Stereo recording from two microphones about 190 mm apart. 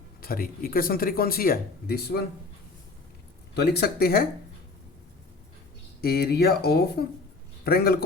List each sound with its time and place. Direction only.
0.2 s speech: 50° left (ahead or behind)
3.5 s speech: 55° left (ahead or behind)
6.0 s speech: 55° left (ahead or behind)